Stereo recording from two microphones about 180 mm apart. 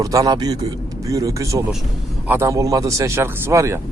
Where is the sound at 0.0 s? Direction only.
20° right (ahead or behind).